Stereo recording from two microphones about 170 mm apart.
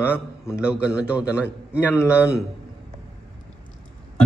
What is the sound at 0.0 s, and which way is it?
Mantra, 10° left (ahead or behind).